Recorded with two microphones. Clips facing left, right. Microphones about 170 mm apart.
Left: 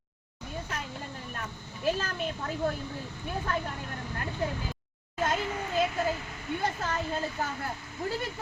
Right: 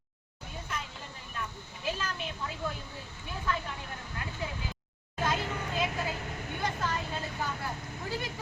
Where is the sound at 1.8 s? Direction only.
50° left (ahead or behind).